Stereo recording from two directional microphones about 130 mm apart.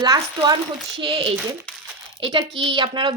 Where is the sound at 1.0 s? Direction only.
45° right (ahead or behind).